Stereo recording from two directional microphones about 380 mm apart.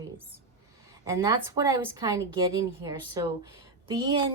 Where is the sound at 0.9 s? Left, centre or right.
Centre.